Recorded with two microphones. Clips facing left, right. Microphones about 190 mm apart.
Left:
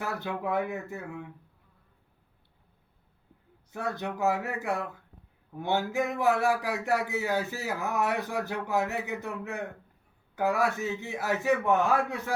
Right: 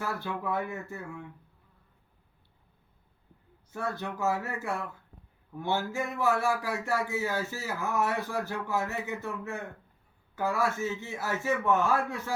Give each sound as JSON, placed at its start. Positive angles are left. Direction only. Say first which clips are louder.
{"t": 0.0, "sound": "speech", "louder": "left 1 dB", "side_deg": 20}
{"t": 3.7, "sound": "speech", "louder": "left 1 dB", "side_deg": 20}